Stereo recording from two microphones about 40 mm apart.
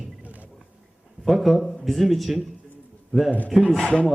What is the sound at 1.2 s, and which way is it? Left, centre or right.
Speech, centre.